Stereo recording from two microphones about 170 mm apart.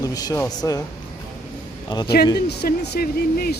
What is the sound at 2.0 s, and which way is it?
Speech, 70° left (ahead or behind).